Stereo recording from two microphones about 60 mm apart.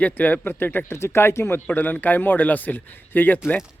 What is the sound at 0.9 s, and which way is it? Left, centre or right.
Speech, left.